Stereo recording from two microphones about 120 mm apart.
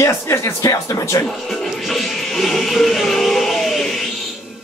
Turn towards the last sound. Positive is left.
turn(degrees=0)  # may be behind; listen again after turning